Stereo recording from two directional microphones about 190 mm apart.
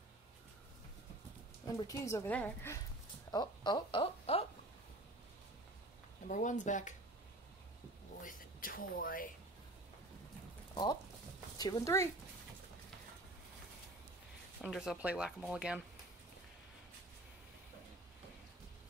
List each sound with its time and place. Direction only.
1.8 s a woman's voice: 15° left (ahead or behind)
3.3 s speech: 20° left (ahead or behind)
6.2 s speech: 40° left (ahead or behind)
8.2 s speech: 45° left (ahead or behind)
10.7 s a sound: 20° left (ahead or behind)
11.5 s speech: 20° left (ahead or behind)
14.6 s speech: centre (ahead or behind)